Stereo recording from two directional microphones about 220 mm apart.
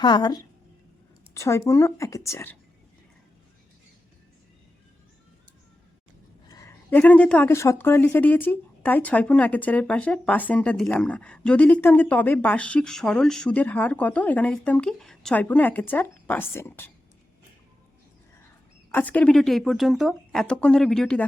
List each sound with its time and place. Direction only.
0.0 s a woman's voice: 20° left (ahead or behind)
6.5 s speech: 15° left (ahead or behind)
18.9 s speech: 10° left (ahead or behind)